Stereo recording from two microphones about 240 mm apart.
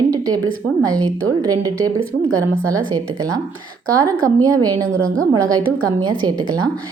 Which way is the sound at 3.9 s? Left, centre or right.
Centre.